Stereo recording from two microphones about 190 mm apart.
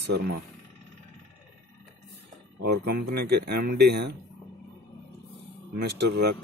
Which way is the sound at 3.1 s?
55° right (ahead or behind).